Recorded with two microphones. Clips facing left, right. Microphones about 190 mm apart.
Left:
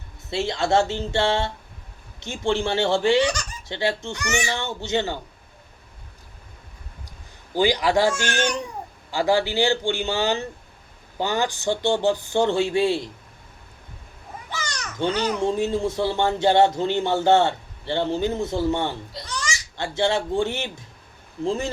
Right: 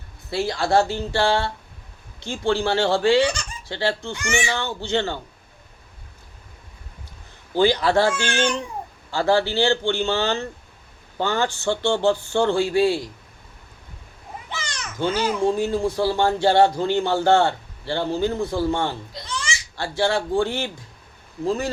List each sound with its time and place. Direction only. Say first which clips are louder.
0.3 s speech: even; 25° left (ahead or behind)
4.3 s speech: right 1 dB; 45° left (ahead or behind)
4.5 s speech: right 1 dB; 20° left (ahead or behind)
7.5 s a man's voice: right 2 dB; 15° left (ahead or behind)
8.1 s speech: right 1 dB; 45° left (ahead or behind)
9.1 s speech: right 1 dB; 15° left (ahead or behind)
14.6 s children playing: left 1 dB; 40° left (ahead or behind)
15.4 s speech: right 2 dB; 25° left (ahead or behind)
19.3 s a sound: right 1 dB; 40° left (ahead or behind)
19.7 s speech: right 1 dB; 20° left (ahead or behind)